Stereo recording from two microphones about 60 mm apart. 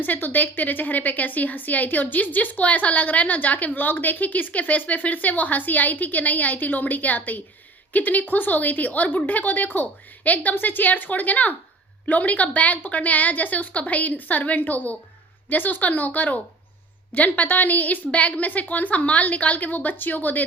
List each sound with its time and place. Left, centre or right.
0.0 s a woman's voice: left